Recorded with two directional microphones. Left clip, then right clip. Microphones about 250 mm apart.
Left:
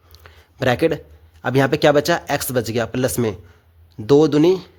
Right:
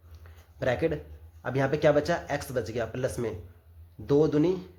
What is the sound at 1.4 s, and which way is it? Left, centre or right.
Speech, left.